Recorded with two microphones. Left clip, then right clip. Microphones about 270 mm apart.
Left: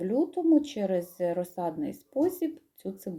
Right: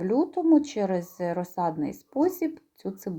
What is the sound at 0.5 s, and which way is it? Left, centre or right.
A woman's voice, right.